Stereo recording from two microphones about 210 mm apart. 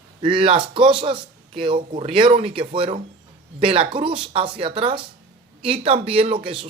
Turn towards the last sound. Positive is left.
turn(degrees=-25)  # may be behind; listen again after turning